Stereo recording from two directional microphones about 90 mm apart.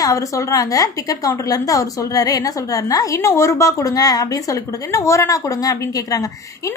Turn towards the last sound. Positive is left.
turn(degrees=40)  # may be behind; listen again after turning